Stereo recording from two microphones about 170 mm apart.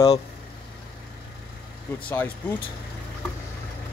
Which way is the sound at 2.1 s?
10° left (ahead or behind).